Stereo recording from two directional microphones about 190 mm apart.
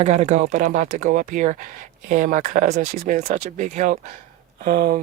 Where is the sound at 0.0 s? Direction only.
35° right (ahead or behind).